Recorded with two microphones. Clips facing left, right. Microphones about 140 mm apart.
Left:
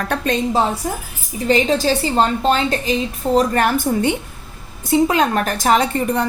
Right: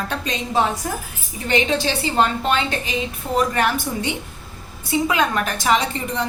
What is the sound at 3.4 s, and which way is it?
A woman's voice, 45° left (ahead or behind).